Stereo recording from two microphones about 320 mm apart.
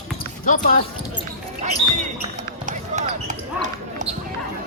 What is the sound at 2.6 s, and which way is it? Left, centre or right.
Basketball bounce, right.